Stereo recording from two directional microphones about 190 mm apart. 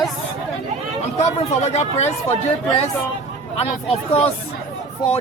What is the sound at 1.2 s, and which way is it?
A man's voice, 35° left (ahead or behind).